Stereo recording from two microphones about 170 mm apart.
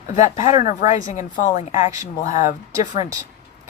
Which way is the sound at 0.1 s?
50° left (ahead or behind).